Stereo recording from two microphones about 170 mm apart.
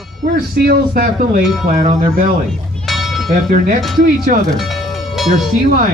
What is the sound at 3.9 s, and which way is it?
Speech, 55° right (ahead or behind).